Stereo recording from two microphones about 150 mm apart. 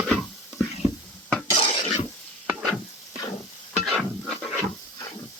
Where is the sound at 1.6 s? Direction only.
40° left (ahead or behind).